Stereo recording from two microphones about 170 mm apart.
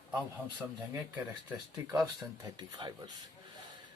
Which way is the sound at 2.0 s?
25° right (ahead or behind).